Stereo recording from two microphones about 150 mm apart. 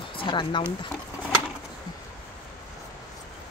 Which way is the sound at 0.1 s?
35° left (ahead or behind).